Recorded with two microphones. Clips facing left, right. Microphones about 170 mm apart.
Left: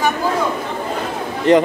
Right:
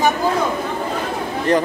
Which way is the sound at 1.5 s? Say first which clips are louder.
Left 5 dB; 20° left (ahead or behind).